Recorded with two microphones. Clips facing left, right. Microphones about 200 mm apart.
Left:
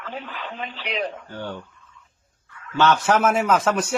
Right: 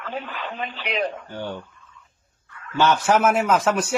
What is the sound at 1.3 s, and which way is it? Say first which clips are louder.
Speech: right 1 dB; 10° right (ahead or behind).